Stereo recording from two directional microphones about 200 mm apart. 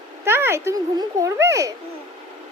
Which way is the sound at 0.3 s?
10° right (ahead or behind).